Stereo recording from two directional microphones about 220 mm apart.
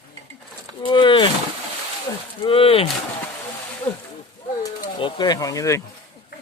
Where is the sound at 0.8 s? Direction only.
20° left (ahead or behind).